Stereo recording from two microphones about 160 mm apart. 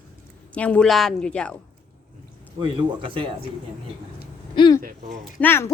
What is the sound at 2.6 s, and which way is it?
Speech, 30° right (ahead or behind).